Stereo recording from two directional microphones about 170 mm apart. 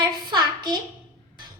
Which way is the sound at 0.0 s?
25° right (ahead or behind).